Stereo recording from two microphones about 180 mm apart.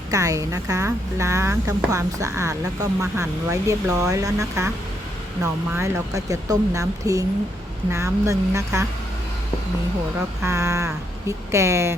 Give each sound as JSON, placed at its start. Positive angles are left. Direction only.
{"t": 0.1, "sound": "a woman's voice", "side_deg": -20}
{"t": 10.4, "sound": "a woman's voice", "side_deg": -15}